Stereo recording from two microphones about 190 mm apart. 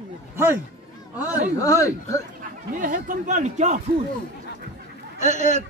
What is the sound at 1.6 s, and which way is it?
Speech, 15° left (ahead or behind).